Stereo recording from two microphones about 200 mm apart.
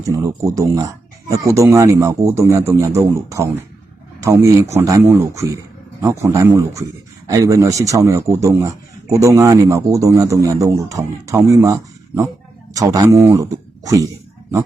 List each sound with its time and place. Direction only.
0.0 s a man's voice: 15° right (ahead or behind)